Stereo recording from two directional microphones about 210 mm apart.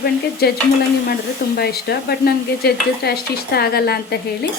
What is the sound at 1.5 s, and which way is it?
Stir, 50° left (ahead or behind).